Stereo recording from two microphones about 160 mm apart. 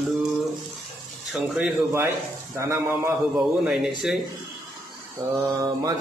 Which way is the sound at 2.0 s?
15° right (ahead or behind).